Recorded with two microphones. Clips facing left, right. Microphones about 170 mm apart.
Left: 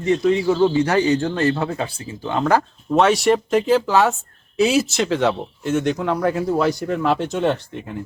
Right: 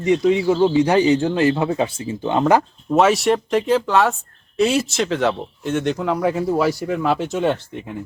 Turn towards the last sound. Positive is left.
turn(degrees=-5)  # may be behind; listen again after turning